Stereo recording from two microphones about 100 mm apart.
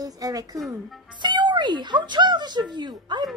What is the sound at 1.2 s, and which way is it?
Speech, 50° right (ahead or behind).